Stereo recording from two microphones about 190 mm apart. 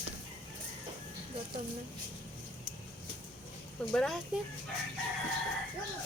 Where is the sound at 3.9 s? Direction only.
Centre (ahead or behind).